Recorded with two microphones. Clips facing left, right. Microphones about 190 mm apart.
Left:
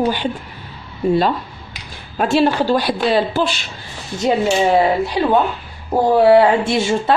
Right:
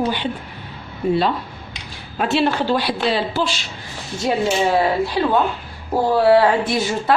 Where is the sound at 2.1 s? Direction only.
45° left (ahead or behind).